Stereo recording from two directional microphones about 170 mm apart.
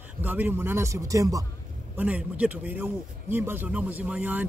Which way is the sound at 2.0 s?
10° right (ahead or behind).